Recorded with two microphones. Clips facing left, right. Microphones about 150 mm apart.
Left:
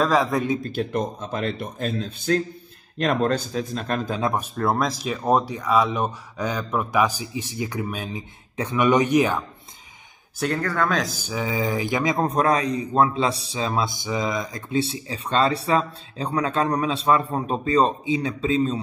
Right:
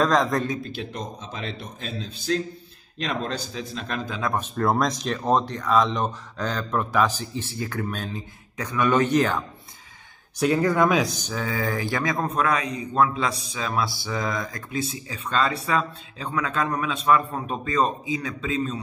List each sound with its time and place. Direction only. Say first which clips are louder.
0.0 s a man's voice: left 1 dB; 5° left (ahead or behind)
0.6 s speech: left 7 dB; 45° left (ahead or behind)
4.6 s speech: right 3 dB; 5° left (ahead or behind)
8.5 s speech: left 2 dB; 20° left (ahead or behind)
10.3 s speech: right 3 dB; centre (ahead or behind)
10.6 s a man's voice: right 4 dB; 15° right (ahead or behind)
11.0 s speech: right 1 dB; 5° left (ahead or behind)
12.2 s a man's voice: left 4 dB; 35° left (ahead or behind); by 14.6 s 15° left (ahead or behind)
14.7 s speech: left 8 dB; 30° left (ahead or behind)